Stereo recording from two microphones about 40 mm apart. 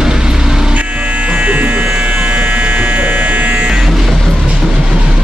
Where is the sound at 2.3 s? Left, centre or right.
Right.